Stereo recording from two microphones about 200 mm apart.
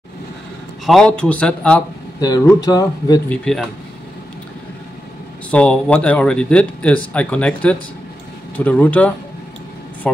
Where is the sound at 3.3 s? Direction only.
5° left (ahead or behind).